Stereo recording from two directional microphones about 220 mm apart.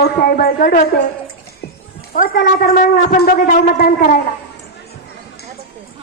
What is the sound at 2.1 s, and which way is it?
A woman's voice, 40° left (ahead or behind).